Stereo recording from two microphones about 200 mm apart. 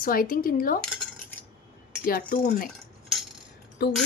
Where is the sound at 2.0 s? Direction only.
45° left (ahead or behind).